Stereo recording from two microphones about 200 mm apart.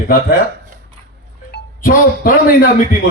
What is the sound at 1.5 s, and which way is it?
Speech, 45° left (ahead or behind).